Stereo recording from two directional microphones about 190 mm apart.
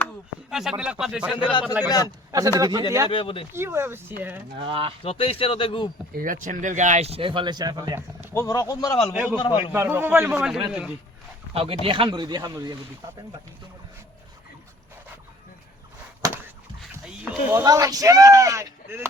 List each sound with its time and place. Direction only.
0.5 s a man's voice: centre (ahead or behind)
2.3 s speech: 20° right (ahead or behind)
3.1 s speech: 30° left (ahead or behind)
3.5 s speech: 15° right (ahead or behind)
4.6 s speech: 30° right (ahead or behind)
5.0 s speech: 30° left (ahead or behind)
6.1 s speech: 45° right (ahead or behind); by 8.0 s 20° right (ahead or behind)
8.3 s speech: 15° left (ahead or behind)
9.7 s a man's voice: 15° right (ahead or behind)
11.5 s speech: 30° right (ahead or behind)
17.5 s speech: 15° right (ahead or behind)